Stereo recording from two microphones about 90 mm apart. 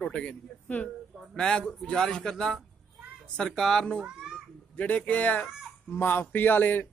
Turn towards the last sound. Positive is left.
turn(degrees=20)  # may be behind; listen again after turning